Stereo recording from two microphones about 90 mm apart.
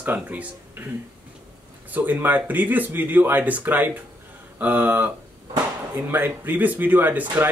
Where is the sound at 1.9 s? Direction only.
20° right (ahead or behind).